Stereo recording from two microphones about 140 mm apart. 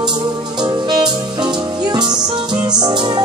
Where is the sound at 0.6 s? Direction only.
30° right (ahead or behind).